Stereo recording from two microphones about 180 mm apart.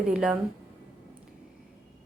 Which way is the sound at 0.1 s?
5° right (ahead or behind).